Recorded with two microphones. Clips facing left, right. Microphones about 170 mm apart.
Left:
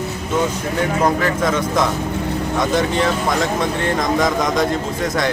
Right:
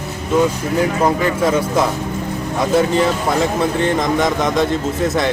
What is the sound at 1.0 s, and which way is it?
Speech, 10° right (ahead or behind).